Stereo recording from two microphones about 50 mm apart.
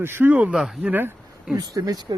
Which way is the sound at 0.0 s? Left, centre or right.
Right.